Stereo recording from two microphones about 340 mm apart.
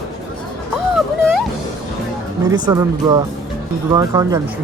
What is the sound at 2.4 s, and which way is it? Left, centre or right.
Speech, centre.